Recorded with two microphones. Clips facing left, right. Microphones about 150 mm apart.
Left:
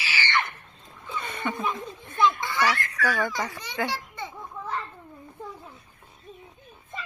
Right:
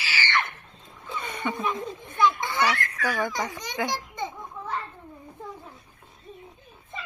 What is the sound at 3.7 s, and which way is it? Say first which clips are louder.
Children playing: right 1 dB; 15° right (ahead or behind).